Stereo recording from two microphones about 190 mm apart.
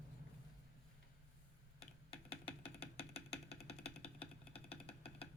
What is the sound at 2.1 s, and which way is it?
Music, 30° left (ahead or behind).